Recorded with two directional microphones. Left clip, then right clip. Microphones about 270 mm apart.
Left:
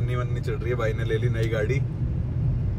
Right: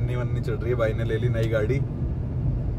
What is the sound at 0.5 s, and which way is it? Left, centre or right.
Speech, centre.